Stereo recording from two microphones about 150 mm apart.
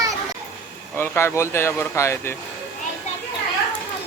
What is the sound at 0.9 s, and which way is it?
Speech, 15° left (ahead or behind).